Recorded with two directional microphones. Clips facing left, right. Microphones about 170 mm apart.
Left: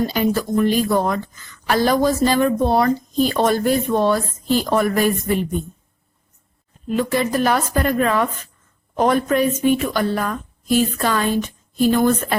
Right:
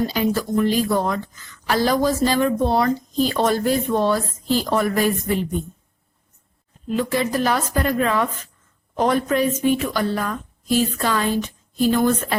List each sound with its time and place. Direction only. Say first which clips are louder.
0.1 s speech: left 2 dB; 50° left (ahead or behind)
6.8 s speech: left 2 dB; 55° left (ahead or behind)